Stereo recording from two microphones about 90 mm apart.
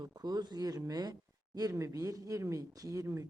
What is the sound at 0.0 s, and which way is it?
Speech, 50° right (ahead or behind).